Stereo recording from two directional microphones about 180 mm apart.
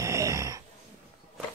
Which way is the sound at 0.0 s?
15° right (ahead or behind).